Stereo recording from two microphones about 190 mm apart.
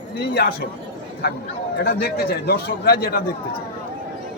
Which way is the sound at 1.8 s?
55° left (ahead or behind).